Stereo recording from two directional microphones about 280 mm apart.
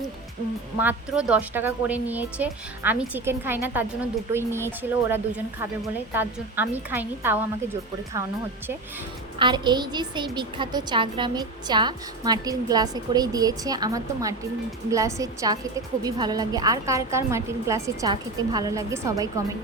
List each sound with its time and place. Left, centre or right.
0.8 s a woman's voice: centre
9.4 s a woman's voice: centre